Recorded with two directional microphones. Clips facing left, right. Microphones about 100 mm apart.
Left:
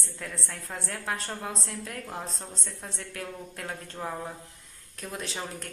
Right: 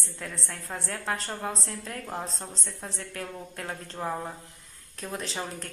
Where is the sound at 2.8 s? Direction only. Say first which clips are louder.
Right 2 dB; centre (ahead or behind).